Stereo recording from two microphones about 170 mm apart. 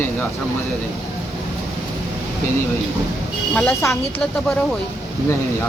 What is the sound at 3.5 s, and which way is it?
Speech, 10° left (ahead or behind).